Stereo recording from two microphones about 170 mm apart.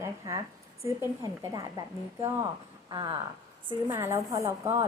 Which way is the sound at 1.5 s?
20° right (ahead or behind).